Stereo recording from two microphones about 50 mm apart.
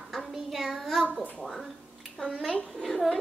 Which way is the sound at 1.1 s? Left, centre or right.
Right.